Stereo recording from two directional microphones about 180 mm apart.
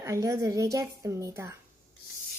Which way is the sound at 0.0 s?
15° right (ahead or behind).